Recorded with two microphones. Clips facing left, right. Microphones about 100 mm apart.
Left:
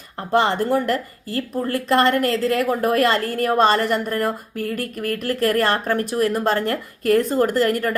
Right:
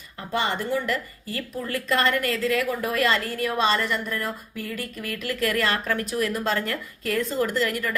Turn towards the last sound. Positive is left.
turn(degrees=45)  # may be behind; listen again after turning